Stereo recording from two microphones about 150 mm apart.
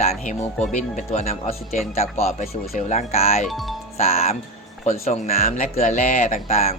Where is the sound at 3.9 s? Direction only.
45° left (ahead or behind).